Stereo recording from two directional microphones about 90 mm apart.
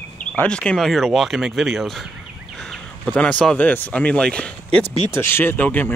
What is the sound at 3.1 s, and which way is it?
Speech, 15° left (ahead or behind).